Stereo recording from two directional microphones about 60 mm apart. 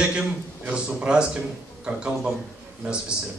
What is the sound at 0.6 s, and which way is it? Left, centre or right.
Speech, right.